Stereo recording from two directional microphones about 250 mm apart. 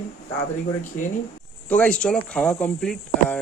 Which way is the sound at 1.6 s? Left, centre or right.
Centre.